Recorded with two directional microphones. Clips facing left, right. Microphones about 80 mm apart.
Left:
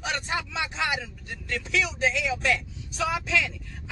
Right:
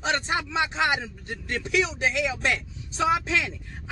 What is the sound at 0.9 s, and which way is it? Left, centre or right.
Speech, right.